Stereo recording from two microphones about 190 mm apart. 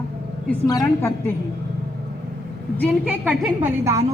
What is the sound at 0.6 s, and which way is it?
Speech, 20° left (ahead or behind).